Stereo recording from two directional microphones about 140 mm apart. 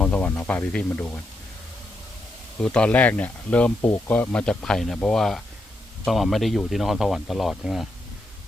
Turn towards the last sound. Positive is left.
turn(degrees=0)  # may be behind; listen again after turning